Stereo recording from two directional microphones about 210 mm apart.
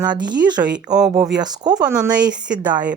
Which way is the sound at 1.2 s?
20° right (ahead or behind).